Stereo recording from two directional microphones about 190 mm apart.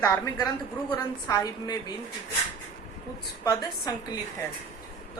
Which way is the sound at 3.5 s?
20° left (ahead or behind).